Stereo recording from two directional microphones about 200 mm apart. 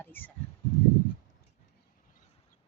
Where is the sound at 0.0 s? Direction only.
10° left (ahead or behind).